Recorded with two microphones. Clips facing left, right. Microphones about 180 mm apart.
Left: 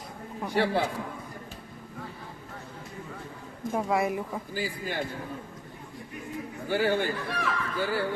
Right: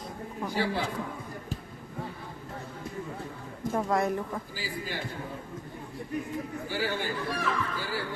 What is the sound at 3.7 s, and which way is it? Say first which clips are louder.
Speech: even; 5° left (ahead or behind).